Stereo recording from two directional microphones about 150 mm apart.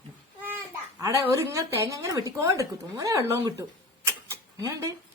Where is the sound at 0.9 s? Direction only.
20° right (ahead or behind).